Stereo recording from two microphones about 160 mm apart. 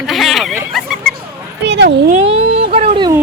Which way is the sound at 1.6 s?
90° right.